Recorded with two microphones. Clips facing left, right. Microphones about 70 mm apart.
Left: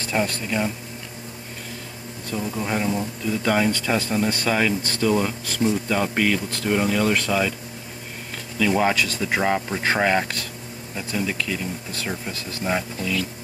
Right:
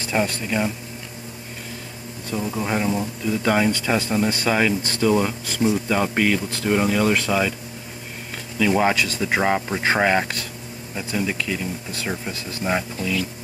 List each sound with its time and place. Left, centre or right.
0.0 s speech: centre
2.3 s speech: centre
8.5 s speech: centre